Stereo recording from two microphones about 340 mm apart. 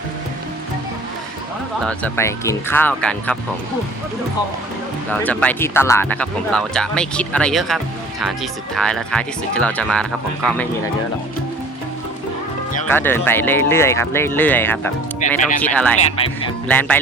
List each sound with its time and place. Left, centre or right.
1.8 s speech: centre
5.1 s speech: centre
12.9 s speech: centre
15.2 s speech: left
15.6 s speech: centre